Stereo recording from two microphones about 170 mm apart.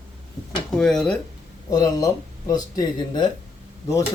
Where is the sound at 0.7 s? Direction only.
5° left (ahead or behind).